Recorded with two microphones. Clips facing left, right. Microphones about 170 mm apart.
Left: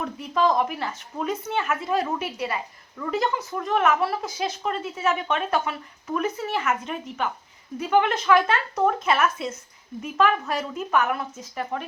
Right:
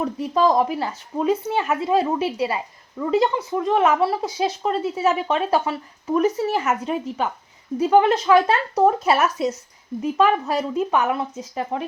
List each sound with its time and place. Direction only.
0.0 s speech: 35° right (ahead or behind)